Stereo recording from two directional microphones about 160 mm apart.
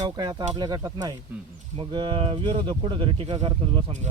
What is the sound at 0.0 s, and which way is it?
Speech, 25° right (ahead or behind).